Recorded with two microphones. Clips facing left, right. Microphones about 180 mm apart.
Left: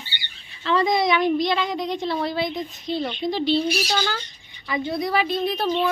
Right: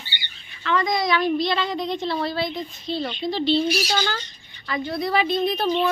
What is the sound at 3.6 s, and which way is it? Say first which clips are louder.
Speech: even; 5° right (ahead or behind).